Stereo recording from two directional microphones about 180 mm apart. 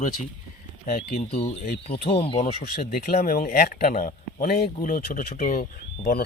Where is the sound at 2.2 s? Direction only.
35° left (ahead or behind).